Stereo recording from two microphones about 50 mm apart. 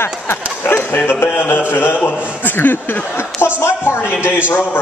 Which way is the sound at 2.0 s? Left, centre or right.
Left.